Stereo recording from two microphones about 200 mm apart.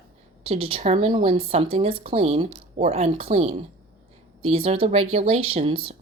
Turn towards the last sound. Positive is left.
turn(degrees=-25)  # may be behind; listen again after turning